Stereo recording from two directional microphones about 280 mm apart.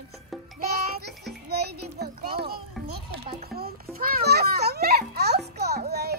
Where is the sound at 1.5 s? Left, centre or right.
Right.